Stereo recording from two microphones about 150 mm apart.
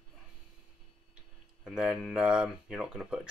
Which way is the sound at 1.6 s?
5° right (ahead or behind).